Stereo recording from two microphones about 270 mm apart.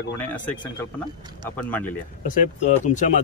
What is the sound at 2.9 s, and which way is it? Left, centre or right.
Speech, left.